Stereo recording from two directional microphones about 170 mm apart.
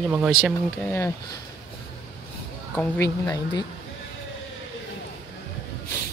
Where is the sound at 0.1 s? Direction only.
10° right (ahead or behind).